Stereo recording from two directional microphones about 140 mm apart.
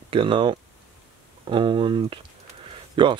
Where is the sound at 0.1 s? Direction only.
35° right (ahead or behind).